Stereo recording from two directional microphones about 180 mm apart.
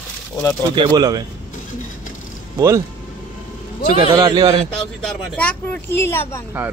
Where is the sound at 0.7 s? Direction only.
25° right (ahead or behind).